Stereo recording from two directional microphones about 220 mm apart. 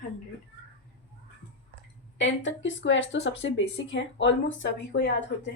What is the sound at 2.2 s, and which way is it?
Speech, 55° left (ahead or behind).